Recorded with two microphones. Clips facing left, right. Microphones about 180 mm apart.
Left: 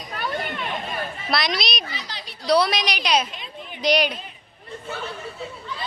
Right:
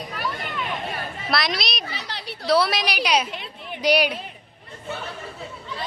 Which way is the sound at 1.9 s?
65° right (ahead or behind).